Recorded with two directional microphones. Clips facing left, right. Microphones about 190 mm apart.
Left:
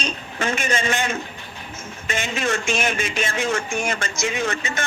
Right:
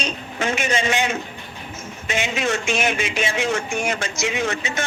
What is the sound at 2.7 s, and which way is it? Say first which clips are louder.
A man's voice: right 1 dB; 50° left (ahead or behind).